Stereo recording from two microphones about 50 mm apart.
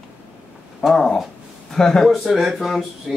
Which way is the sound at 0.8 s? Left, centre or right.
Centre.